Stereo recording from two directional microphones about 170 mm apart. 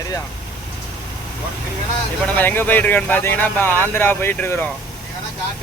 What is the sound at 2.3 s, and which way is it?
Speech, 10° left (ahead or behind).